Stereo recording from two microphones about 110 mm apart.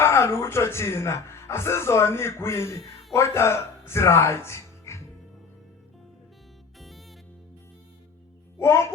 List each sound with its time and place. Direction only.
0.0 s speech: 25° left (ahead or behind)
6.7 s music: centre (ahead or behind)
8.5 s music: 25° left (ahead or behind)